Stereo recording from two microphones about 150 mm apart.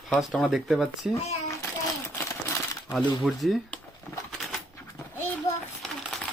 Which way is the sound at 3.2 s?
Centre (ahead or behind).